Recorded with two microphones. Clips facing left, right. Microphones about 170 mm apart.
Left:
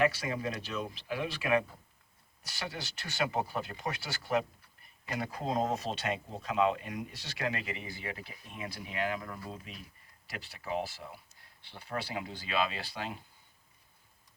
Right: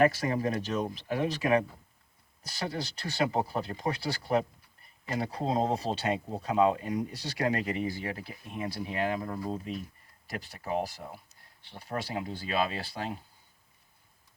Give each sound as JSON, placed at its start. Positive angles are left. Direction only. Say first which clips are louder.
{"t": 0.0, "sound": "speech", "louder": "right 5 dB", "side_deg": -45}